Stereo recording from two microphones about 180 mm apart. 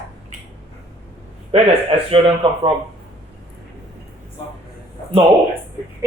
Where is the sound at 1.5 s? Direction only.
35° right (ahead or behind).